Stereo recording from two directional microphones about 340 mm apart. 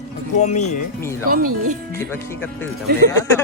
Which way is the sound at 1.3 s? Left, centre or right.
Right.